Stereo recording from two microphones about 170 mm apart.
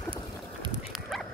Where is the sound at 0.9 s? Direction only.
Centre (ahead or behind).